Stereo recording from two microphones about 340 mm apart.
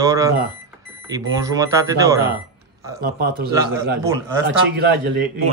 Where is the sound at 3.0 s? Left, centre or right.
Right.